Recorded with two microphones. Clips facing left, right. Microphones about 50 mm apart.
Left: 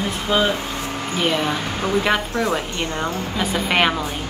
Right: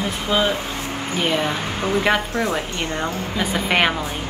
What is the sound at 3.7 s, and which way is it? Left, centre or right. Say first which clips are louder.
Speech: even; centre.